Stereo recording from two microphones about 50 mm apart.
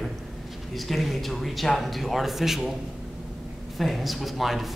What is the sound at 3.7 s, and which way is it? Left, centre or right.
Speech, centre.